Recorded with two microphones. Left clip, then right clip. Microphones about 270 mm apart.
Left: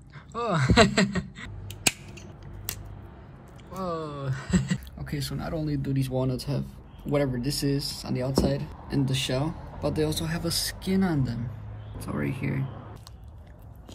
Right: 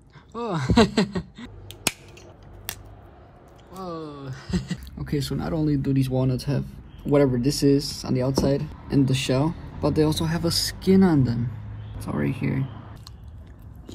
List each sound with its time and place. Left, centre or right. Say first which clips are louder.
0.3 s speech: left 1 dB; centre
3.7 s a sound: left 2 dB; centre
4.9 s speech: right 6 dB; centre
5.8 s speech: right 4 dB; centre
12.1 s speech: right 4 dB; centre